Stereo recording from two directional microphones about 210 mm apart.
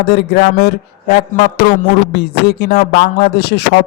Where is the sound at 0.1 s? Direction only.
55° left (ahead or behind).